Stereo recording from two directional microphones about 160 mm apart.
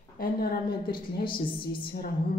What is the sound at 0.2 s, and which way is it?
Speech, 65° left (ahead or behind).